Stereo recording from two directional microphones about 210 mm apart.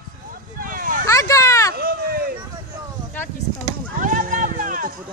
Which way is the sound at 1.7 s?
45° right (ahead or behind).